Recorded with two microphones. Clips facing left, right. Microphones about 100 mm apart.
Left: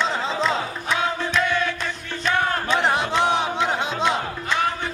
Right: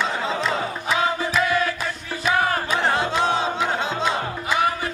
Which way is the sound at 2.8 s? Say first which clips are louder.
Even; 20° left (ahead or behind).